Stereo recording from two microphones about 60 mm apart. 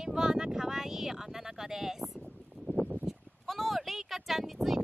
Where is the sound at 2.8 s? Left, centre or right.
Right.